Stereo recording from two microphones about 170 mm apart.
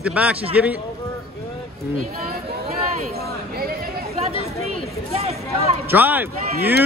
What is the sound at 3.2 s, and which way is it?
Chatter, 65° right (ahead or behind).